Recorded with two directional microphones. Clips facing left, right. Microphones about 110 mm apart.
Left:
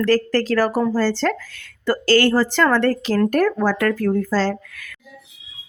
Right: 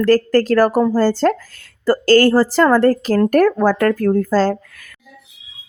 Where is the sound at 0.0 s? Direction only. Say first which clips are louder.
Right 4 dB; 45° right (ahead or behind).